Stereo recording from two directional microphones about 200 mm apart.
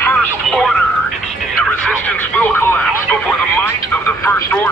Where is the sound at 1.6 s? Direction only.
5° left (ahead or behind).